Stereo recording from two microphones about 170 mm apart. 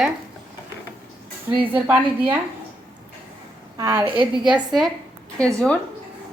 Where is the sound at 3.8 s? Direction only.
10° right (ahead or behind).